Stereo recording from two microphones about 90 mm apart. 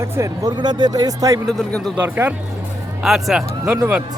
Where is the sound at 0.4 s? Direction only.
55° right (ahead or behind).